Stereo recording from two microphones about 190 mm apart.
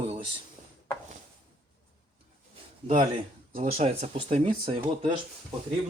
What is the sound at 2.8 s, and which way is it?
Speech, 30° right (ahead or behind).